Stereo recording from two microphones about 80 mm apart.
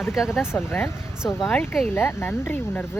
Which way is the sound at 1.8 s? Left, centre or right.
Left.